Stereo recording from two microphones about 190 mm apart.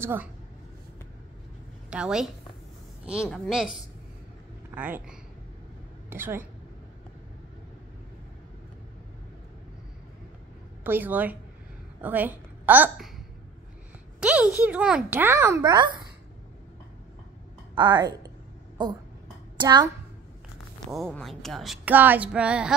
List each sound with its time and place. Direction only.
0.0 s a child's voice: 10° right (ahead or behind)
1.9 s a woman's voice: 5° right (ahead or behind)
10.8 s a woman's voice: 10° right (ahead or behind)
14.2 s a child's voice: 5° right (ahead or behind); by 16.0 s 25° right (ahead or behind)
17.7 s a woman's voice: 25° right (ahead or behind)
19.5 s a child's voice: 25° right (ahead or behind)
20.9 s speech: centre (ahead or behind)